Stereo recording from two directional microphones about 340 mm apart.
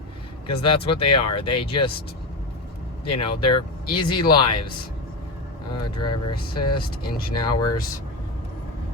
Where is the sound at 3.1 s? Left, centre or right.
Left.